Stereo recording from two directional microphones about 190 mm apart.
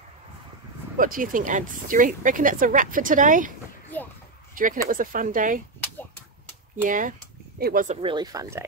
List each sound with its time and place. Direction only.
0.9 s speech: 45° right (ahead or behind)
3.9 s a sound: 10° left (ahead or behind)
4.8 s speech: 45° right (ahead or behind)
6.8 s speech: 45° right (ahead or behind)
8.0 s speech: 25° right (ahead or behind)